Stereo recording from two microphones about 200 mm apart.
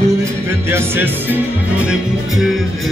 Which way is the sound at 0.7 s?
10° right (ahead or behind).